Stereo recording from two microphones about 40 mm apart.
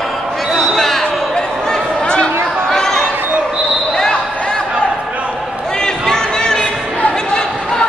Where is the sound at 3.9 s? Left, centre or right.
Centre.